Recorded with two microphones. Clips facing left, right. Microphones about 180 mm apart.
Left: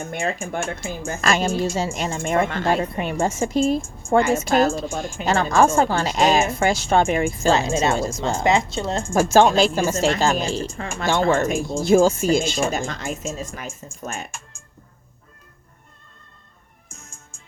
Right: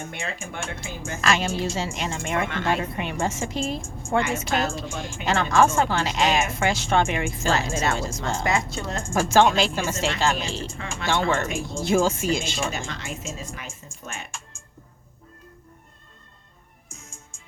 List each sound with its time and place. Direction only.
0.0 s a woman's voice: 45° left (ahead or behind)
7.5 s speech: 20° left (ahead or behind)
9.3 s speech: 40° left (ahead or behind)